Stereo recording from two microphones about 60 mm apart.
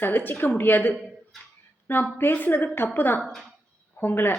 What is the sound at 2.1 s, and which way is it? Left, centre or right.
A woman's voice, left.